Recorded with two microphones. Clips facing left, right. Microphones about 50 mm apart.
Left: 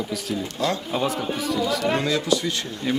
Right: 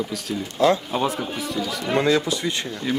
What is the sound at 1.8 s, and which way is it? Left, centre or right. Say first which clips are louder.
Speech: right 3 dB; right.